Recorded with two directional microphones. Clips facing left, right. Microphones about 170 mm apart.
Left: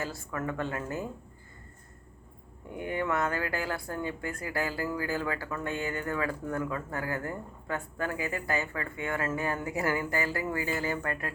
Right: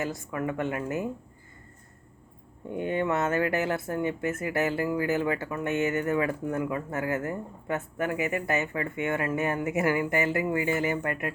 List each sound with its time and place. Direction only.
0.0 s a woman's voice: 20° right (ahead or behind)
2.6 s speech: 25° right (ahead or behind)